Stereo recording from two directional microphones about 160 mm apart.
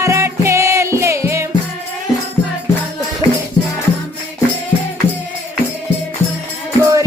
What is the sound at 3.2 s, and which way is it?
Music, 30° left (ahead or behind).